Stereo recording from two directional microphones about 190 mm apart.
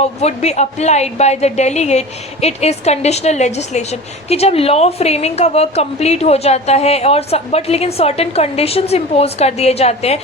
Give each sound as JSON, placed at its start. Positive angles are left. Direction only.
{"t": 0.0, "sound": "a woman's voice", "side_deg": 35}